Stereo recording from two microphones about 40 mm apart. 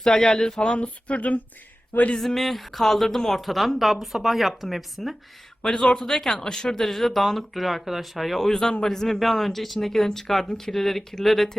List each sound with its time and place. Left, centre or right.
0.0 s speech: centre
0.6 s speech: left
2.1 s speech: centre
5.6 s speech: left; by 11.5 s centre